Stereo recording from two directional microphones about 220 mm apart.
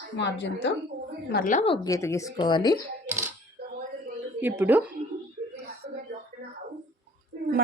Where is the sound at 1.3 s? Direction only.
40° left (ahead or behind).